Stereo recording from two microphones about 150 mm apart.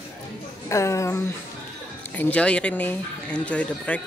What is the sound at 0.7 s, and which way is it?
A woman's voice, 20° left (ahead or behind).